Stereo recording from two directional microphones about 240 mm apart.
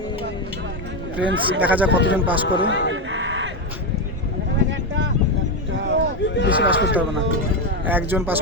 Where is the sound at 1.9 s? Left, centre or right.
Left.